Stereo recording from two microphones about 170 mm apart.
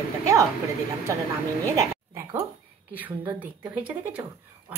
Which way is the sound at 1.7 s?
15° right (ahead or behind).